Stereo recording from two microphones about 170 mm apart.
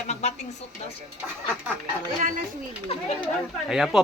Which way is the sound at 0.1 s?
40° left (ahead or behind).